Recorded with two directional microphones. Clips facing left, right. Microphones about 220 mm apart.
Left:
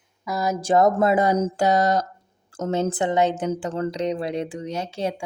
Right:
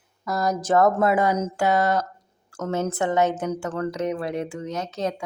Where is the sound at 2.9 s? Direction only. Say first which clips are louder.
Left 1 dB; 15° left (ahead or behind).